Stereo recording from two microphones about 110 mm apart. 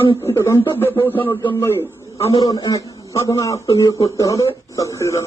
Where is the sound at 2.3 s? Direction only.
35° left (ahead or behind).